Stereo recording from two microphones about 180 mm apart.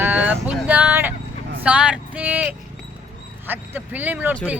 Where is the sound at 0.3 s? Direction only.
10° right (ahead or behind).